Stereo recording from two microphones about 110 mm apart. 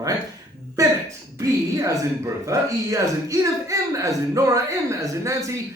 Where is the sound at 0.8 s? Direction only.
30° right (ahead or behind).